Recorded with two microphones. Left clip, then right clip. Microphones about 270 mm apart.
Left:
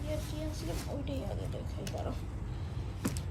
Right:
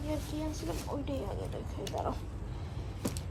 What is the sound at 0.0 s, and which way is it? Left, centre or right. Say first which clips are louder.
Speech: right 2 dB; right.